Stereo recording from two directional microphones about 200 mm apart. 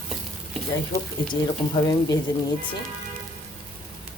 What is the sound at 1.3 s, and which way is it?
Speech, 20° left (ahead or behind).